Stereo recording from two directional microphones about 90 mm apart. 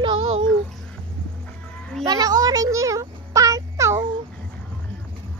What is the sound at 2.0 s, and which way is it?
A child's voice, 45° right (ahead or behind).